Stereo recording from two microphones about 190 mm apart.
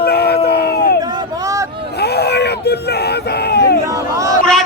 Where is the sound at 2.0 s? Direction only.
60° left (ahead or behind).